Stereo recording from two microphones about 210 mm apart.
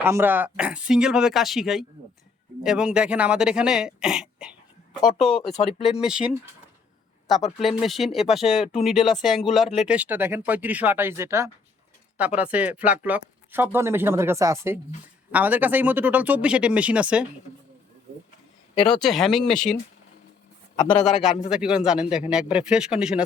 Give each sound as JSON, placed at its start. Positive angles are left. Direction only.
{"t": 0.0, "sound": "speech", "side_deg": -10}
{"t": 6.0, "sound": "speech", "side_deg": -5}
{"t": 7.6, "sound": "speech", "side_deg": 0}
{"t": 18.7, "sound": "speech", "side_deg": 25}
{"t": 19.0, "sound": "speech", "side_deg": 0}
{"t": 20.7, "sound": "a man's voice", "side_deg": 20}
{"t": 21.0, "sound": "speech", "side_deg": 0}